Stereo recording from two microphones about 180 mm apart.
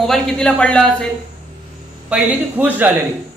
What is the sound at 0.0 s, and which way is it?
A man's voice, centre (ahead or behind).